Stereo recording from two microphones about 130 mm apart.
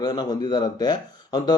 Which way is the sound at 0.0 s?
30° left (ahead or behind).